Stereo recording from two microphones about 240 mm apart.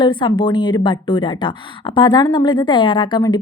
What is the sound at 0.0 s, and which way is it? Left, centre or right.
A woman's voice, centre.